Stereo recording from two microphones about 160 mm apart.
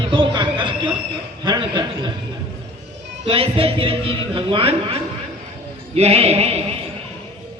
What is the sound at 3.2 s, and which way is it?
A man's voice, 35° right (ahead or behind).